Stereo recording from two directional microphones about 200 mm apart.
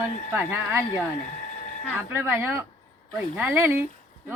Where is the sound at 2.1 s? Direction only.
10° right (ahead or behind).